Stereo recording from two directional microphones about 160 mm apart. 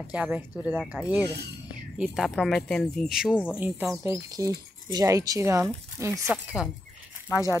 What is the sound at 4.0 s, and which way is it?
Speech, 20° right (ahead or behind).